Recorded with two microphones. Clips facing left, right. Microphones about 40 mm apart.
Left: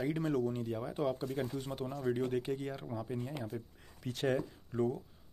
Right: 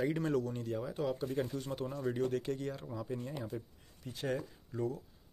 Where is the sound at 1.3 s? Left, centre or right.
Centre.